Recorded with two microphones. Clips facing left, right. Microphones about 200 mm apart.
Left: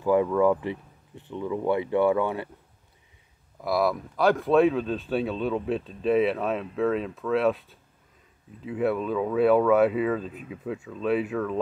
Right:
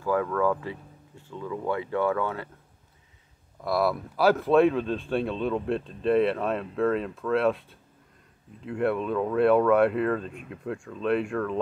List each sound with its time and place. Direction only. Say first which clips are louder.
0.0 s speech: left 4 dB; 20° left (ahead or behind)
3.6 s speech: left 1 dB; centre (ahead or behind)